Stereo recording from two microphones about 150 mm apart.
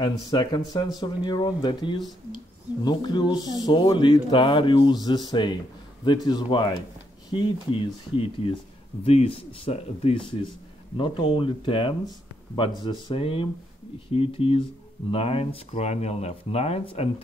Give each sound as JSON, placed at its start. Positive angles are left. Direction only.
{"t": 0.0, "sound": "speech", "side_deg": 30}